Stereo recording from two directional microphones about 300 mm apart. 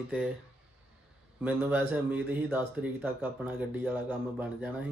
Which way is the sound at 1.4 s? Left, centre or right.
Centre.